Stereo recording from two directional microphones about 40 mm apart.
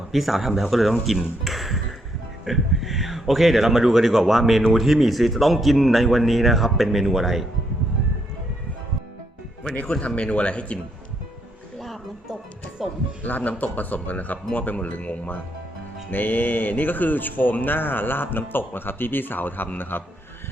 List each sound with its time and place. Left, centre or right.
0.1 s speech: centre
10.2 s speech: left
11.8 s a sound: centre
12.8 s speech: centre
13.2 s speech: left
16.0 s speech: left